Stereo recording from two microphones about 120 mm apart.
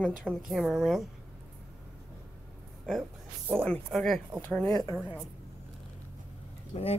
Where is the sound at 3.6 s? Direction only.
5° left (ahead or behind).